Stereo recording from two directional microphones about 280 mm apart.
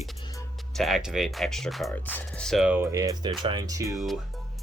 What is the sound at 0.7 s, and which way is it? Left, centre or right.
Speech, centre.